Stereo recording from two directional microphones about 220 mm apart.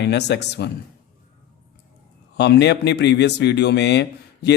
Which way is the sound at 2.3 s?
50° left (ahead or behind).